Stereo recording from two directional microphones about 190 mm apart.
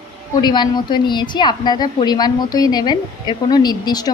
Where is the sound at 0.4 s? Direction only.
20° left (ahead or behind).